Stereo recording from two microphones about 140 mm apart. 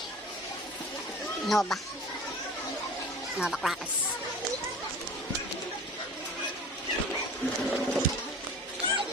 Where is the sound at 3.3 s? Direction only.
5° right (ahead or behind).